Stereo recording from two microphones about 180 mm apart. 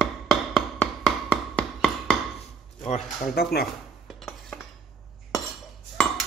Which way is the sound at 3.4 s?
60° left (ahead or behind).